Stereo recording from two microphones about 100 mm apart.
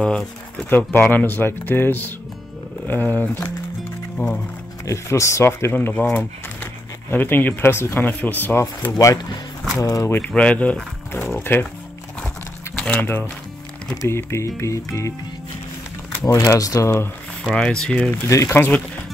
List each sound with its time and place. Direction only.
0.7 s speech: 15° left (ahead or behind)
4.2 s speech: 30° left (ahead or behind)
8.9 s speech: 40° left (ahead or behind)
10.1 s speech: 15° left (ahead or behind)
11.1 s a sound: 20° left (ahead or behind)
12.7 s speech: 15° left (ahead or behind); by 15.1 s 30° left (ahead or behind)
16.3 s speech: 30° left (ahead or behind)
17.4 s speech: 10° left (ahead or behind)
18.5 s speech: 20° left (ahead or behind)